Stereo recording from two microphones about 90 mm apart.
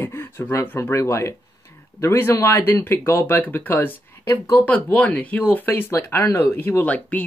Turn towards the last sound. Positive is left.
turn(degrees=15)  # may be behind; listen again after turning